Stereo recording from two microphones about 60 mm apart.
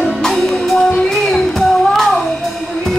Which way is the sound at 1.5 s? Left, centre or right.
Centre.